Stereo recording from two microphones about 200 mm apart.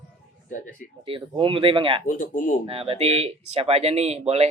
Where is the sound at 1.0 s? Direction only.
25° right (ahead or behind).